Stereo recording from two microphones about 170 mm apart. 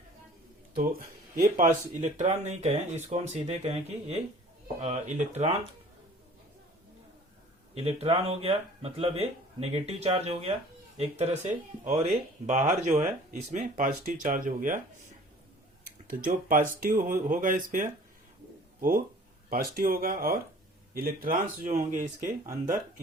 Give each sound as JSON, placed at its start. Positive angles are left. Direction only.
{"t": 0.8, "sound": "speech", "side_deg": -55}
{"t": 7.8, "sound": "speech", "side_deg": -35}
{"t": 15.8, "sound": "speech", "side_deg": -55}